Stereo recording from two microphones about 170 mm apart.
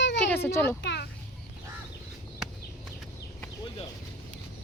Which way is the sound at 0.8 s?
90° left.